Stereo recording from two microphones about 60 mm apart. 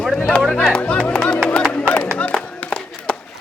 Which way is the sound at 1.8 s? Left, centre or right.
Centre.